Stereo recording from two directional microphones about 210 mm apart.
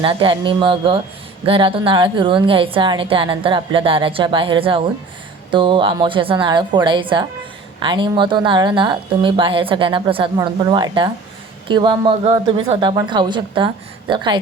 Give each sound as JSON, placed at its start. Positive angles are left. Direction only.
{"t": 0.0, "sound": "a woman's voice", "side_deg": -25}